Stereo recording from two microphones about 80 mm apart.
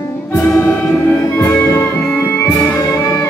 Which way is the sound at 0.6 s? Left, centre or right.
Centre.